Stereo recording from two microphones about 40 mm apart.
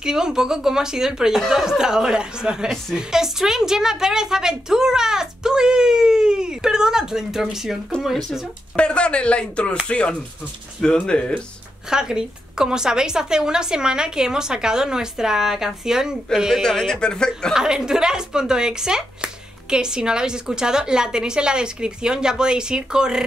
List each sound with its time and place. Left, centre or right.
0.0 s a woman's voice: centre
8.7 s speech: left
11.9 s a woman's voice: centre
16.6 s a man's voice: centre
17.6 s a woman's voice: centre